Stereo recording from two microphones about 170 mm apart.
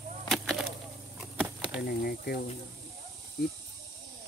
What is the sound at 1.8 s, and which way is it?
Speech, 65° left (ahead or behind).